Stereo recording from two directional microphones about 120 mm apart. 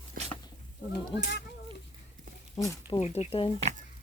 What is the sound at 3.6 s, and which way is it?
Speech, 65° right (ahead or behind).